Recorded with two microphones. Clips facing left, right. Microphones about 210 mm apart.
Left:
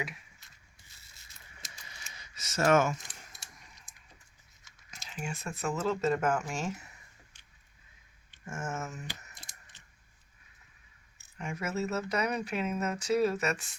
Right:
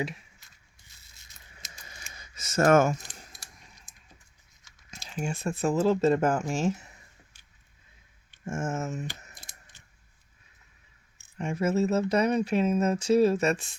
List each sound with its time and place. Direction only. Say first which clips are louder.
1.9 s a sound: right 3 dB; 50° right (ahead or behind)
4.9 s speech: right 6 dB; 30° right (ahead or behind)
8.4 s speech: right 6 dB; 25° right (ahead or behind)
9.7 s scissors: right 2 dB; 10° right (ahead or behind)
11.3 s speech: right 8 dB; 30° right (ahead or behind)